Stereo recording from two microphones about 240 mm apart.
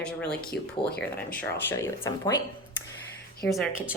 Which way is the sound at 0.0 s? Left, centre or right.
Centre.